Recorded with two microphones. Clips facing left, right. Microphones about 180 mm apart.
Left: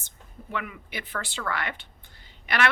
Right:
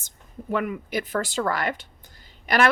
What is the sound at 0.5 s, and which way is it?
A woman's voice, 40° right (ahead or behind).